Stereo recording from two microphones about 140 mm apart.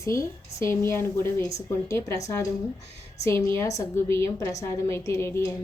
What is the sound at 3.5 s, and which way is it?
A woman's voice, 20° left (ahead or behind).